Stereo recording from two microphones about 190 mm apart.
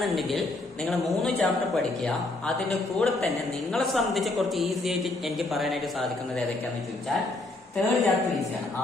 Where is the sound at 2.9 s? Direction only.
Centre (ahead or behind).